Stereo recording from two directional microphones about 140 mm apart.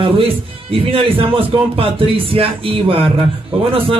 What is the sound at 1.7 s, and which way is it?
A man's voice, 40° right (ahead or behind).